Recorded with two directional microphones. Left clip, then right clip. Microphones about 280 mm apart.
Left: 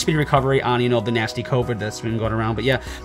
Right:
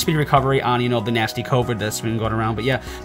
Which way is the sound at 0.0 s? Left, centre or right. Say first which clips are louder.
Right 1 dB; centre.